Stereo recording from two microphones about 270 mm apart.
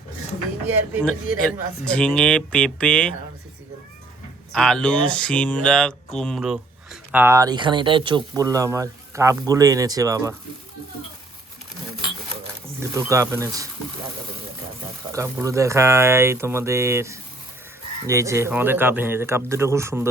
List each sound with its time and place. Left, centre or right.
1.8 s speech: centre
4.5 s speech: centre
12.9 s speech: centre
15.1 s speech: centre